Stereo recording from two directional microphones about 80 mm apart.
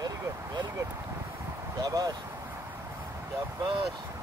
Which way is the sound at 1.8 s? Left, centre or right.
Right.